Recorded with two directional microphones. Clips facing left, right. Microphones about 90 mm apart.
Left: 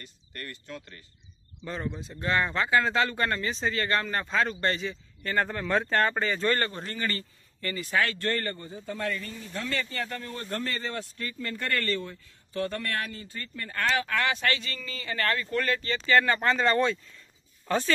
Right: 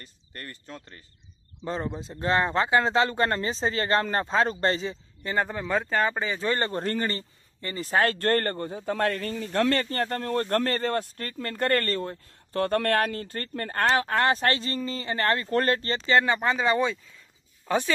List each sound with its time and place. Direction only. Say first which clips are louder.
0.0 s a man's voice: even; 30° right (ahead or behind)
5.2 s speech: right 1 dB; 15° right (ahead or behind)
6.7 s speech: right 9 dB; 55° right (ahead or behind)
7.0 s speech: right 3 dB; 25° right (ahead or behind)
7.8 s speech: right 5 dB; 40° right (ahead or behind)
16.1 s speech: right 1 dB; 20° right (ahead or behind)
16.3 s speech: even; 10° right (ahead or behind)